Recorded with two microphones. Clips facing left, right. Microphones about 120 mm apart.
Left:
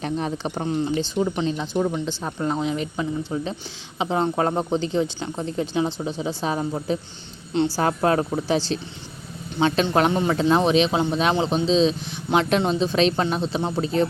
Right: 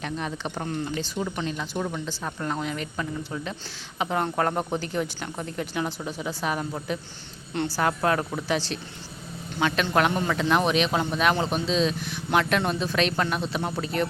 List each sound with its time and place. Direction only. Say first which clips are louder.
0.0 s speech: left 5 dB; 35° left (ahead or behind)
0.6 s speech: left 7 dB; 20° left (ahead or behind)